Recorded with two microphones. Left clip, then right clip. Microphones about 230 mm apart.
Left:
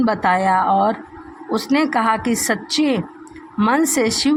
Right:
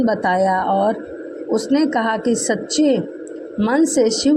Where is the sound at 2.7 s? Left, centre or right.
Left.